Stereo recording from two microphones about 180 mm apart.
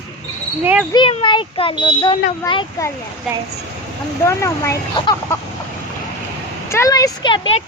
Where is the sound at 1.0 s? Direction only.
25° left (ahead or behind).